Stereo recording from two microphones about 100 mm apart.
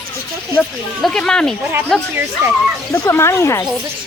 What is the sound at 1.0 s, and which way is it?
Speech, 5° left (ahead or behind).